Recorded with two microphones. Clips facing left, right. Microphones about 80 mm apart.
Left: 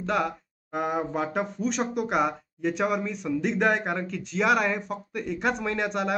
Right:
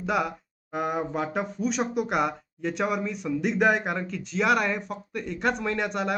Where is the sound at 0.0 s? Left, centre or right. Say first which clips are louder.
Even; centre.